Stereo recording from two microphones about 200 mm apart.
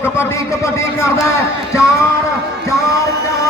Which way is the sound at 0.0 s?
15° left (ahead or behind).